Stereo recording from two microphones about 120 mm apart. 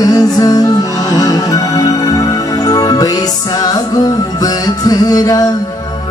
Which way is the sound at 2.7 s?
30° left (ahead or behind).